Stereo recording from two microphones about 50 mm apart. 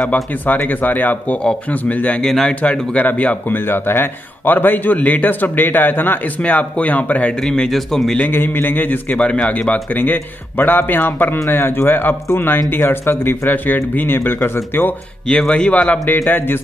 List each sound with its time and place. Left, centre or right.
0.6 s a man's voice: left
2.2 s speech: centre
2.6 s a man's voice: left
3.6 s a man's voice: left
7.4 s speech: centre
7.7 s a man's voice: centre
8.3 s speech: left
9.1 s speech: left
9.5 s a man's voice: left
15.2 s speech: centre
15.7 s a man's voice: left